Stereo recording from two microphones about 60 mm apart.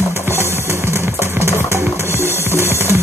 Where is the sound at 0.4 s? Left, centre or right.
Right.